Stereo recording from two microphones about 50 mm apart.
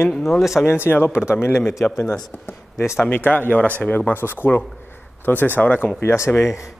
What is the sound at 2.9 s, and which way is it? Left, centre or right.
Speech, left.